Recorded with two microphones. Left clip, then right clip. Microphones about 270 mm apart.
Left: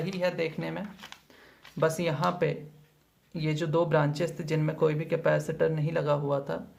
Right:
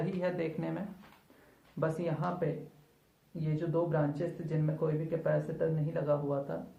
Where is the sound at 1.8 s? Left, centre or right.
Left.